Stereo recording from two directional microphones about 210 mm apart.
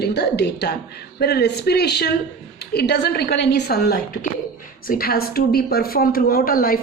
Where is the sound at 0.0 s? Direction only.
50° left (ahead or behind).